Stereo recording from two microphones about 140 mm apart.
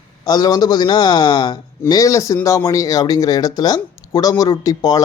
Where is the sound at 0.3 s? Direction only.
30° left (ahead or behind).